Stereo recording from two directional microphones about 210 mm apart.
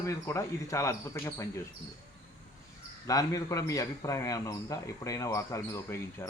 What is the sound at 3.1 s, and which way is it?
A man's voice, 15° left (ahead or behind).